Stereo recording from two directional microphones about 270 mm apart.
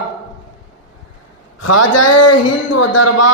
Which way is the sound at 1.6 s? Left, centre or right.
Left.